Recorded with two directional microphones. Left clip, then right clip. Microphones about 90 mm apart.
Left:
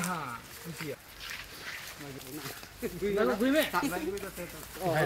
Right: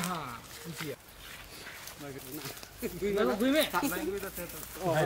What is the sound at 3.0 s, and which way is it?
Speech, 25° right (ahead or behind).